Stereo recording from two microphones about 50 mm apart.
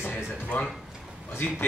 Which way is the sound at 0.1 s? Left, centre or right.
Left.